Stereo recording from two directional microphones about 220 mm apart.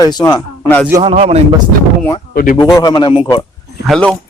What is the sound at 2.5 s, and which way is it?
Speech, 15° left (ahead or behind).